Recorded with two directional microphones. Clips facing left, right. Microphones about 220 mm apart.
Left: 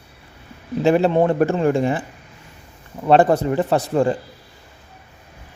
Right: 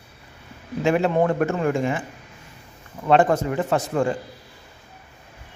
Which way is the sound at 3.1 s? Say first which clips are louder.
Left 3 dB; 35° left (ahead or behind).